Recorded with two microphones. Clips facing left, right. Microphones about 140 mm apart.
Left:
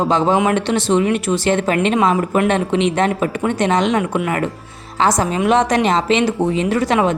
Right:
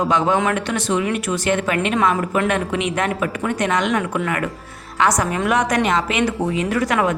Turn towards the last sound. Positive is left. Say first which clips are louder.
# left 3 dB
turn(degrees=25)  # may be behind; listen again after turning